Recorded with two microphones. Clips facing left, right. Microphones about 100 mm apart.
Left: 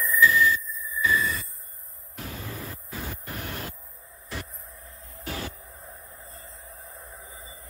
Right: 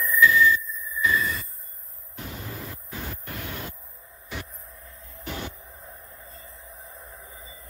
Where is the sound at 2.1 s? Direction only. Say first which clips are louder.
Even; 25° right (ahead or behind).